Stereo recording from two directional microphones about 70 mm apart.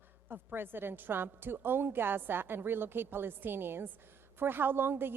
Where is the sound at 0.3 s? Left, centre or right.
Right.